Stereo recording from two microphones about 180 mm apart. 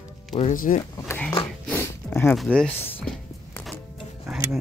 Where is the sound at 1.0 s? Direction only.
10° left (ahead or behind).